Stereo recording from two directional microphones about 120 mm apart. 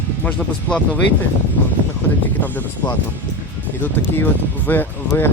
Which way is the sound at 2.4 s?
15° left (ahead or behind).